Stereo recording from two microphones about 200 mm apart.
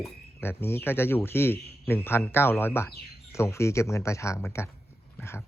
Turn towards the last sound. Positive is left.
turn(degrees=10)  # may be behind; listen again after turning